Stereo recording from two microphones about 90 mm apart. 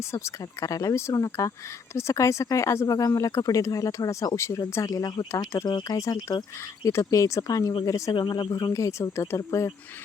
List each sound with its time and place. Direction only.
0.1 s speech: 35° left (ahead or behind)
5.6 s speech: 50° left (ahead or behind)
6.0 s speech: 35° left (ahead or behind)
8.2 s speech: 55° left (ahead or behind)
8.7 s speech: 35° left (ahead or behind)